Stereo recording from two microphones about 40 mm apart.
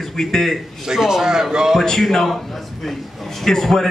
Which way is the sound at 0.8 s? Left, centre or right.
Centre.